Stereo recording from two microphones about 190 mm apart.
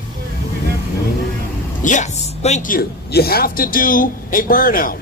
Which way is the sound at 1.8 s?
40° left (ahead or behind).